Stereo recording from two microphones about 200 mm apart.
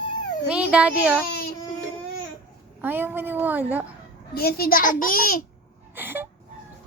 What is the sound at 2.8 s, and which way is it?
A woman's voice, 10° right (ahead or behind).